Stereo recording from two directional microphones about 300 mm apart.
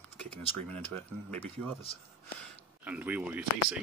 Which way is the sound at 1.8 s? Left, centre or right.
Centre.